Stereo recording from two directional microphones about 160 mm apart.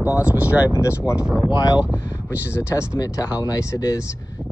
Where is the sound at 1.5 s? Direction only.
25° left (ahead or behind).